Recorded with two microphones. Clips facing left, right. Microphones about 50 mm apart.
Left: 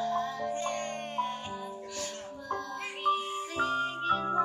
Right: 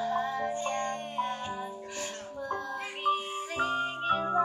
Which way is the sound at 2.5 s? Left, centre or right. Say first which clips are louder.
Even; centre.